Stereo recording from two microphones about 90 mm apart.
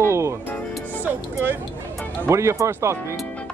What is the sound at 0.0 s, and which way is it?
Music, 30° right (ahead or behind).